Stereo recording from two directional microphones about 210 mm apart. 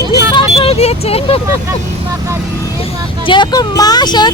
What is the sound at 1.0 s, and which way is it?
Speech, 30° left (ahead or behind).